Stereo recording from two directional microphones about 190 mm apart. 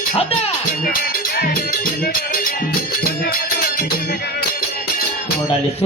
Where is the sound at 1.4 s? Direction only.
50° left (ahead or behind).